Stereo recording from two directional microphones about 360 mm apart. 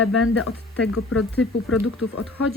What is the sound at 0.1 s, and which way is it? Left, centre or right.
Speech, left.